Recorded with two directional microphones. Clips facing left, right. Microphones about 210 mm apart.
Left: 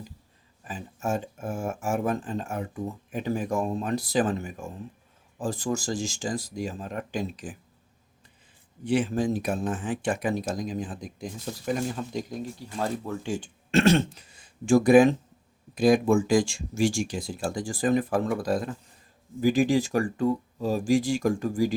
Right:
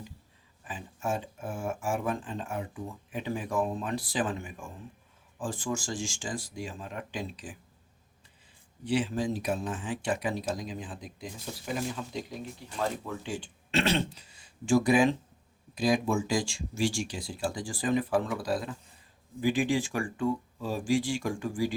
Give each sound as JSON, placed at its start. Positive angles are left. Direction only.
{"t": 0.6, "sound": "speech", "side_deg": 40}
{"t": 8.8, "sound": "speech", "side_deg": 50}